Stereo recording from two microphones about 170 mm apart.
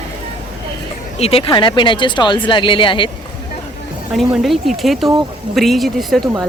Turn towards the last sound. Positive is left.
turn(degrees=0)  # may be behind; listen again after turning